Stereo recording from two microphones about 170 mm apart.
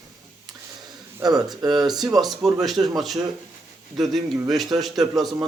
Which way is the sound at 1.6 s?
25° right (ahead or behind).